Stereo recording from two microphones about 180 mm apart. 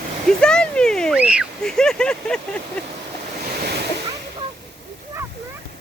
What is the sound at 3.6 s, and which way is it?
Splash, 60° right (ahead or behind).